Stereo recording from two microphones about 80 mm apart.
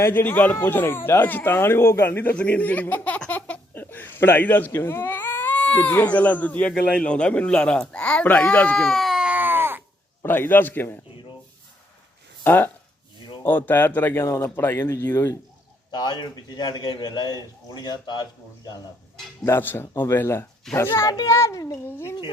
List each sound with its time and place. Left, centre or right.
0.0 s speech: left
2.3 s speech: centre
8.8 s baby cry: centre
9.2 s a sound: right
10.2 s speech: left
12.5 s speech: left
15.9 s a man's voice: left
19.5 s speech: left
21.8 s speech: left